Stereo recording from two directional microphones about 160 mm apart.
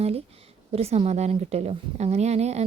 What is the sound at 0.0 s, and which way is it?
A woman's voice, 40° right (ahead or behind).